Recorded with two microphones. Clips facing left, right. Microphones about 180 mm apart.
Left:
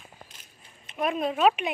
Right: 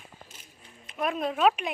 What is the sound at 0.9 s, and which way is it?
Speech, centre (ahead or behind).